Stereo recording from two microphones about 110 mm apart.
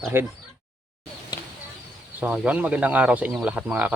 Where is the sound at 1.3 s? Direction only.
40° left (ahead or behind).